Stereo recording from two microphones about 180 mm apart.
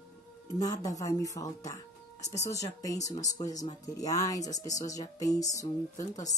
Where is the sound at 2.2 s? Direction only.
40° left (ahead or behind).